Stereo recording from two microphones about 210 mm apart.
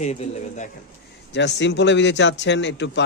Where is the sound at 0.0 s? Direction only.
30° left (ahead or behind).